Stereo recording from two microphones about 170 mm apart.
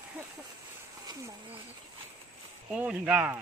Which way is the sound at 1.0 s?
15° right (ahead or behind).